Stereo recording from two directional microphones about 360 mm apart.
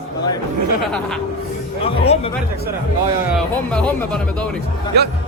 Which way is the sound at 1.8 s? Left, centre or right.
Centre.